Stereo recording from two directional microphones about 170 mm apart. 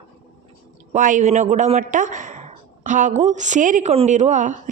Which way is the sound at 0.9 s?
50° right (ahead or behind).